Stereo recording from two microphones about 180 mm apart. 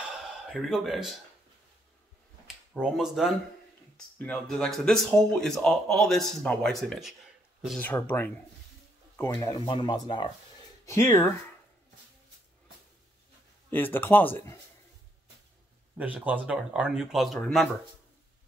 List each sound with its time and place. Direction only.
0.5 s speech: centre (ahead or behind)
2.4 s speech: centre (ahead or behind)
7.8 s speech: 10° left (ahead or behind)
13.7 s speech: 10° left (ahead or behind)
16.0 s speech: 10° right (ahead or behind)